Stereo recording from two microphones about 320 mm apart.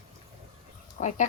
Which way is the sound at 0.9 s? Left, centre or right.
Left.